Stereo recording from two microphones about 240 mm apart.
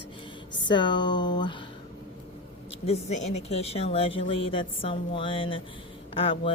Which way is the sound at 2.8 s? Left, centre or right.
Left.